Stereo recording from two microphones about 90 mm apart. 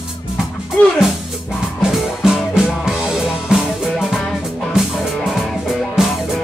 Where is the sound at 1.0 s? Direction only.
5° right (ahead or behind).